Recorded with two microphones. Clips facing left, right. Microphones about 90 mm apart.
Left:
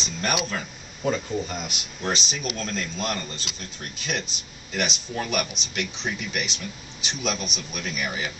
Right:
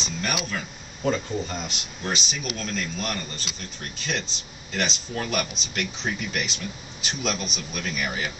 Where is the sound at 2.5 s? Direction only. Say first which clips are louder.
Left 1 dB; 35° left (ahead or behind).